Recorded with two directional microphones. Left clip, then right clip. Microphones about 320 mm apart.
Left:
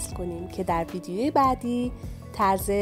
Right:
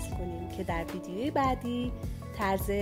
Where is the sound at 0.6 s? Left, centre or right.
Left.